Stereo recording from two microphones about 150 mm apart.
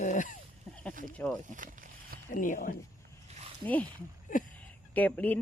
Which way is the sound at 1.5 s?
60° right (ahead or behind).